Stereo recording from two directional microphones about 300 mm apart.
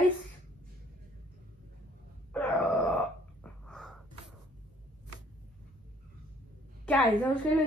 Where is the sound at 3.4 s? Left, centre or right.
Centre.